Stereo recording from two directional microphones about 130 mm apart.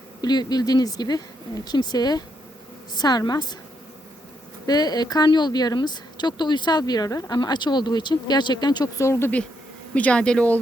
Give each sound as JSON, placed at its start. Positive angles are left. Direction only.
{"t": 0.2, "sound": "speech", "side_deg": 30}
{"t": 4.6, "sound": "speech", "side_deg": 30}